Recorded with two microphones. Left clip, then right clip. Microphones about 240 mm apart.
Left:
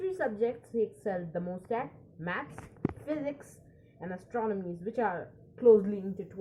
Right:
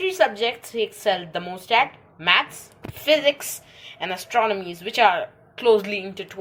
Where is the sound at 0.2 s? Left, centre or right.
Right.